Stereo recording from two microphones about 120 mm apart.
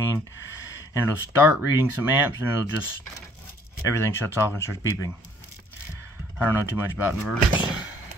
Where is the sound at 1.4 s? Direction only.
15° right (ahead or behind).